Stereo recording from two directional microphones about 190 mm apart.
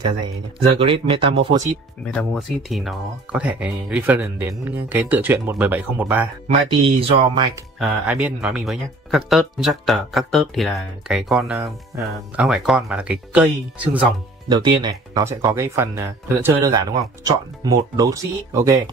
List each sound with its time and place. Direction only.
0.7 s speech: 30° right (ahead or behind)
2.0 s speech: centre (ahead or behind)
6.7 s speech: 25° right (ahead or behind)
7.8 s speech: 5° right (ahead or behind)
11.6 s speech: 15° right (ahead or behind)
12.4 s speech: 5° right (ahead or behind)
14.5 s speech: 25° right (ahead or behind)